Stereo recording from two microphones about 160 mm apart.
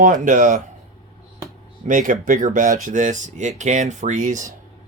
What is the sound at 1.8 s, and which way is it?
Speech, 55° right (ahead or behind).